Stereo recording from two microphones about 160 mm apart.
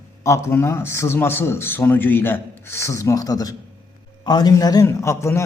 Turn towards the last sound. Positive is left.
turn(degrees=20)  # may be behind; listen again after turning